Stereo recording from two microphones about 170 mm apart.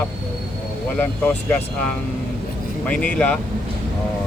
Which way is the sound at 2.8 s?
5° left (ahead or behind).